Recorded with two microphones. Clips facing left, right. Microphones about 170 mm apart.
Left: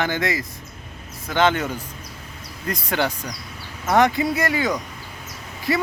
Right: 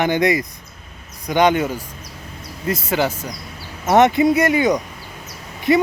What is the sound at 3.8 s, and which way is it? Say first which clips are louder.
Speech: right 5 dB; 20° right (ahead or behind).